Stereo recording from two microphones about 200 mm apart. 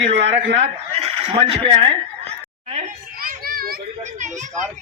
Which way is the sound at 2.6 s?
40° right (ahead or behind).